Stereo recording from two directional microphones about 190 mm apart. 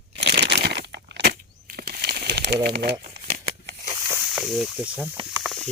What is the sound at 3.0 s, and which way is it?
Shuffling cards, 55° right (ahead or behind).